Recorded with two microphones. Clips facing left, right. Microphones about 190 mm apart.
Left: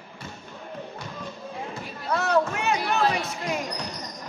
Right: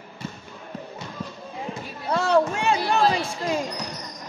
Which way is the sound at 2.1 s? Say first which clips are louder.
Right 3 dB; 30° right (ahead or behind).